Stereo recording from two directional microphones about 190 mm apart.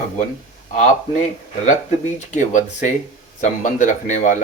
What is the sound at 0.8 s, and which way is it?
Speech, 40° left (ahead or behind).